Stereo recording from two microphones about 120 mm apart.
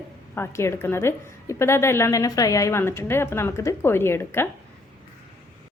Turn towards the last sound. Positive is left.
turn(degrees=20)  # may be behind; listen again after turning